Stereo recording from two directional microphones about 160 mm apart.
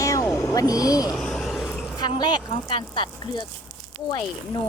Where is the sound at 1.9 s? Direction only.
25° left (ahead or behind).